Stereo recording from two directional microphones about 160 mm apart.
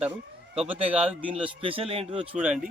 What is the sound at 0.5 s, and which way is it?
Speech, 5° right (ahead or behind).